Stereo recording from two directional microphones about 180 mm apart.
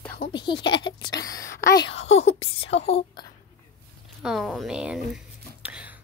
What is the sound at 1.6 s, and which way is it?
Speech, 60° left (ahead or behind).